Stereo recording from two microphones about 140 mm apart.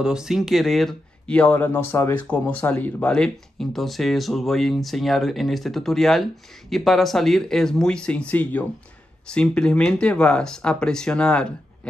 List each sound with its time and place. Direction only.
0.0 s speech: 5° right (ahead or behind)